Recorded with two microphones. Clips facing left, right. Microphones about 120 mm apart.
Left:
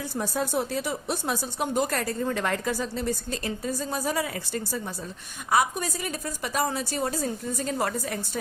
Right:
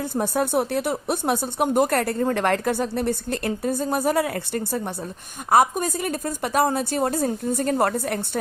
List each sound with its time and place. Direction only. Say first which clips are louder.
0.0 s speech: right 6 dB; 55° right (ahead or behind)